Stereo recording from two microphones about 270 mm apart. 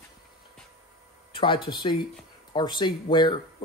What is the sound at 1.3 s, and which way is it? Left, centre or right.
Speech, centre.